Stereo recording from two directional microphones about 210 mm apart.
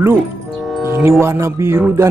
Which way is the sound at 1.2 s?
10° right (ahead or behind).